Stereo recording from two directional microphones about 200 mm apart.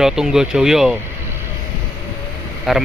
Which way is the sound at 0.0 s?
Centre (ahead or behind).